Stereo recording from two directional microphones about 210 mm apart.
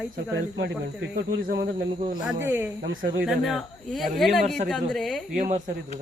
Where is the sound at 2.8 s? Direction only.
55° right (ahead or behind).